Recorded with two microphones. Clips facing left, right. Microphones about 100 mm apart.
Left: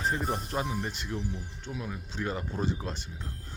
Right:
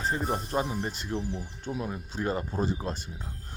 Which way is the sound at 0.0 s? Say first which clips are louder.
Right 1 dB; centre (ahead or behind).